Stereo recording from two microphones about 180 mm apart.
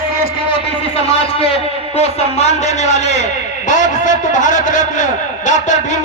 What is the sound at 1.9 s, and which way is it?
A man's voice, 35° left (ahead or behind).